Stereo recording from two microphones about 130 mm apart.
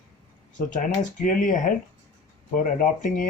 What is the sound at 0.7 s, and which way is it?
Speech, 75° left (ahead or behind).